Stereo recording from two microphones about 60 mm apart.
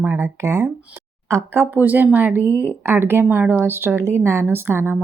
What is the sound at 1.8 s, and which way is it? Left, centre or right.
A woman's voice, right.